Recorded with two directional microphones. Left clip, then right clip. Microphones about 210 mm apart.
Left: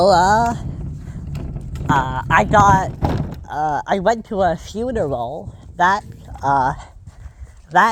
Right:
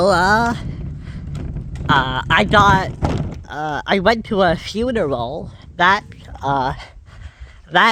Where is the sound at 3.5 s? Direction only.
20° right (ahead or behind).